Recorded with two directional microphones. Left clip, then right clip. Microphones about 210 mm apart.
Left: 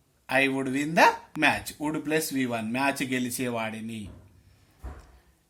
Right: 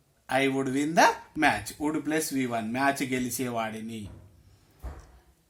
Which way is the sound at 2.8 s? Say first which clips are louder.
Right 1 dB; 60° left (ahead or behind).